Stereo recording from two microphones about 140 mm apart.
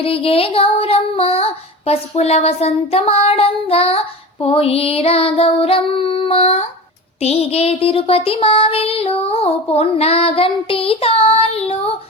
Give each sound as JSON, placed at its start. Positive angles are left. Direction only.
{"t": 0.0, "sound": "child singing", "side_deg": 45}